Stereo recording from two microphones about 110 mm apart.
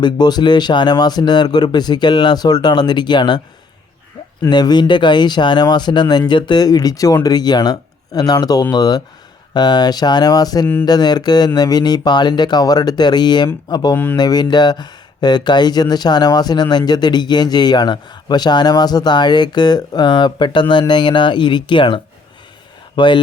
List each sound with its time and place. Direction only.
0.0 s speech: 40° left (ahead or behind)
4.4 s speech: 40° left (ahead or behind)
13.9 s speech: 20° left (ahead or behind)
14.2 s speech: 40° left (ahead or behind)